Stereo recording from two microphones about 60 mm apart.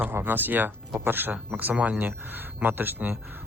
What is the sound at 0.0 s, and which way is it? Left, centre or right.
Speech, right.